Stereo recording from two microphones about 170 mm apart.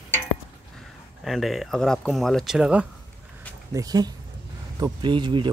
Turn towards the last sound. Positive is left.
turn(degrees=-25)  # may be behind; listen again after turning